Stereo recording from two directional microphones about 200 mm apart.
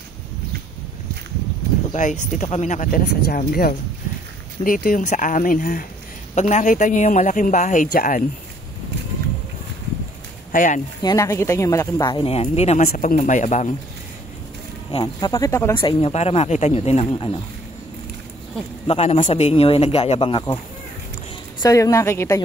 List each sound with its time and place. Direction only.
2.0 s speech: 40° left (ahead or behind)
10.5 s speech: 45° left (ahead or behind)
11.0 s speech: 20° left (ahead or behind)
12.8 s speech: 40° left (ahead or behind)
14.9 s a man's voice: 25° left (ahead or behind)
15.7 s speech: 25° left (ahead or behind)
18.9 s a man's voice: 30° left (ahead or behind)
21.6 s speech: 15° left (ahead or behind)